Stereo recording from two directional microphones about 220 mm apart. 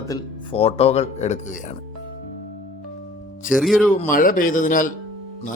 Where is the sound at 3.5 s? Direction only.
Centre (ahead or behind).